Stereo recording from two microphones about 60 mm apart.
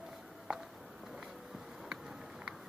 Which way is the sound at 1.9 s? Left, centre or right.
Centre.